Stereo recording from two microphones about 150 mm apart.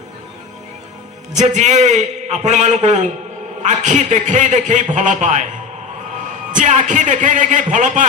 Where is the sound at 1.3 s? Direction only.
50° right (ahead or behind).